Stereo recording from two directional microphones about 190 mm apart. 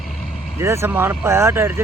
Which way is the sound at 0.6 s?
15° right (ahead or behind).